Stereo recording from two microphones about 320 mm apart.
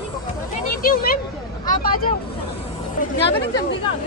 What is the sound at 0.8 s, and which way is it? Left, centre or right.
Speech, left.